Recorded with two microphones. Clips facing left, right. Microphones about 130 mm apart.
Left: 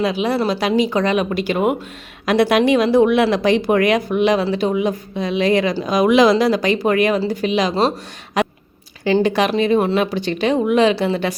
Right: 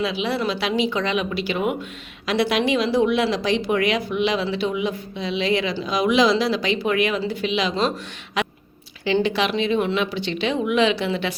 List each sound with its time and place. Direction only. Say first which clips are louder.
0.0 s speech: left 5 dB; 45° left (ahead or behind)
8.4 s chewing: left 6 dB; 40° left (ahead or behind)
9.0 s speech: left 5 dB; 45° left (ahead or behind)